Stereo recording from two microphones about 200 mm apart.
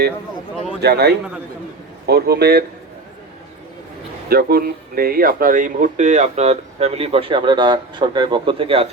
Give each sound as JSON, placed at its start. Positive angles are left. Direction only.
{"t": 0.8, "sound": "a man's voice", "side_deg": -55}
{"t": 4.3, "sound": "speech", "side_deg": -50}